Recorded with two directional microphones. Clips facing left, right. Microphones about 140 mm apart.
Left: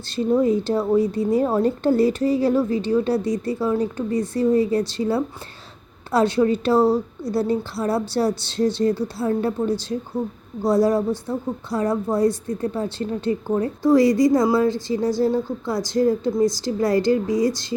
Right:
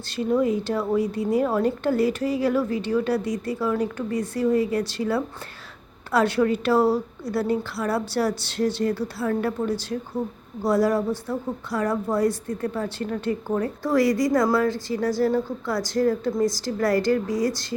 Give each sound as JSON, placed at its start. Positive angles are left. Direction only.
{"t": 0.2, "sound": "a woman's voice", "side_deg": 30}